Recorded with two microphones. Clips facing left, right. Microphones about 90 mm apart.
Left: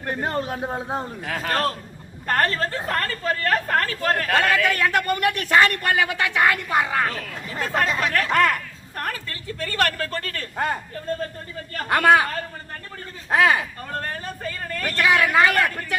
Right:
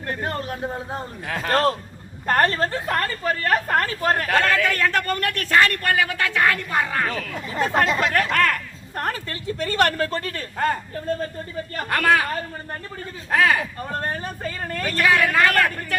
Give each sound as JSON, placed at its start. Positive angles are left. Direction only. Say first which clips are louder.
{"t": 0.1, "sound": "speech", "louder": "left 2 dB", "side_deg": 20}
{"t": 1.3, "sound": "speech", "louder": "right 2 dB", "side_deg": 0}
{"t": 2.2, "sound": "a woman's voice", "louder": "right 2 dB", "side_deg": -20}
{"t": 4.4, "sound": "a man's voice", "louder": "even", "side_deg": 15}
{"t": 7.6, "sound": "a woman's voice", "louder": "right 3 dB", "side_deg": -20}
{"t": 8.3, "sound": "speech", "louder": "left 2 dB", "side_deg": 20}
{"t": 9.0, "sound": "a woman's voice", "louder": "right 3 dB", "side_deg": -25}
{"t": 11.9, "sound": "speech", "louder": "left 3 dB", "side_deg": 25}
{"t": 13.3, "sound": "speech", "louder": "left 1 dB", "side_deg": 20}
{"t": 14.0, "sound": "a woman's voice", "louder": "right 2 dB", "side_deg": -25}
{"t": 14.9, "sound": "speech", "louder": "left 1 dB", "side_deg": 20}